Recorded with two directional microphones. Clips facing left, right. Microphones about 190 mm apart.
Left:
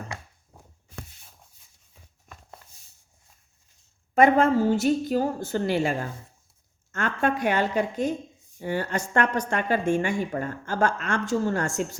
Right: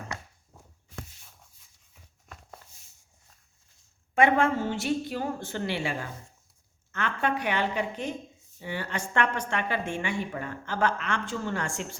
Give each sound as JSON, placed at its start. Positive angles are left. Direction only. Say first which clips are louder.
{"t": 4.1, "sound": "a woman's voice", "louder": "left 4 dB", "side_deg": 40}